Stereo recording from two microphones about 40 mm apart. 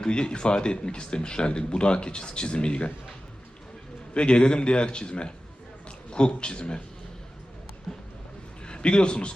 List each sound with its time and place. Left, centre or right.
0.0 s speech: left
4.1 s speech: left
7.9 s speech: centre
8.6 s a man's voice: left